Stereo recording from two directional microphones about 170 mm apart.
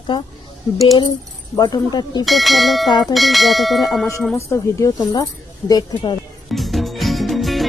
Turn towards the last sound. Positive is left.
turn(degrees=0)  # may be behind; listen again after turning